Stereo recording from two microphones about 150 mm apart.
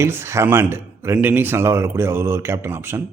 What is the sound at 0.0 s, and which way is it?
A man's voice, 15° right (ahead or behind).